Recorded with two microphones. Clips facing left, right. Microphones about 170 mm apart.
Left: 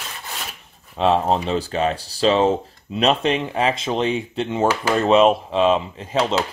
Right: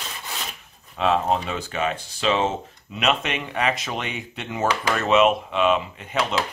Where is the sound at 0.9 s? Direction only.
30° left (ahead or behind).